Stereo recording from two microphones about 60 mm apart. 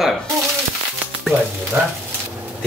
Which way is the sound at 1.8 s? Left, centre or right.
Right.